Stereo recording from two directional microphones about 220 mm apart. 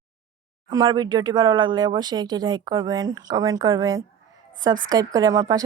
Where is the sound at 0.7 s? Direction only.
15° right (ahead or behind).